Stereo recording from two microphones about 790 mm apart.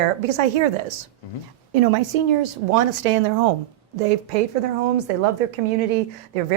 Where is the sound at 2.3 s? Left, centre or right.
Right.